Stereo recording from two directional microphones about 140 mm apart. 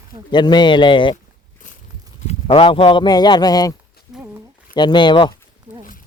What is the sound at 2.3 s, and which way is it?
Speech, 45° left (ahead or behind).